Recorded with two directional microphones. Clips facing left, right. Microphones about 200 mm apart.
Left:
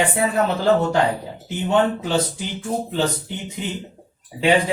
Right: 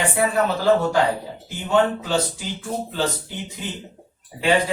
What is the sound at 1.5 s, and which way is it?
Speech, 20° left (ahead or behind).